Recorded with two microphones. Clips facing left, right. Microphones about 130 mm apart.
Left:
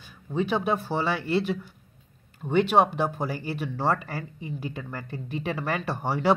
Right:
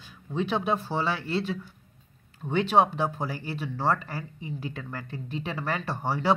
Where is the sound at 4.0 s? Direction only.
60° left (ahead or behind).